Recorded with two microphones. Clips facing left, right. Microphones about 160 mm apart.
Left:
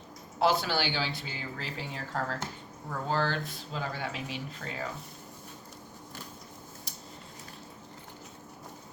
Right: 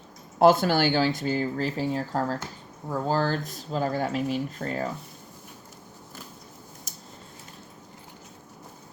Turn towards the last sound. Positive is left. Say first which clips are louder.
# right 1 dB
turn(degrees=-45)  # may be behind; listen again after turning